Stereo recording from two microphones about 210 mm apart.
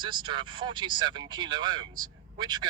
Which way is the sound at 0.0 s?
20° right (ahead or behind).